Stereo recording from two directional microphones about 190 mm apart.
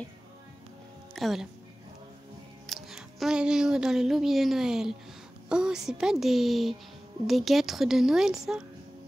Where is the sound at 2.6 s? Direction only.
Centre (ahead or behind).